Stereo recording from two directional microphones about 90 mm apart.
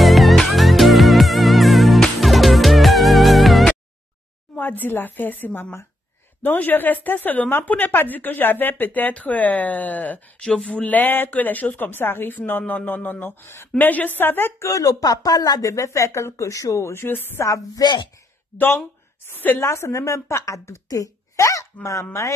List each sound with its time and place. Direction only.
0.0 s music: centre (ahead or behind)
4.6 s speech: 20° left (ahead or behind)
14.7 s a woman's voice: 40° left (ahead or behind); by 17.5 s 25° left (ahead or behind)
17.5 s speech: 45° left (ahead or behind)
19.2 s a woman's voice: 25° left (ahead or behind)